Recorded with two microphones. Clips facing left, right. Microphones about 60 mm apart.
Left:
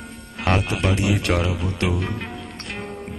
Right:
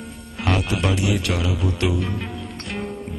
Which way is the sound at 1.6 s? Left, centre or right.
Left.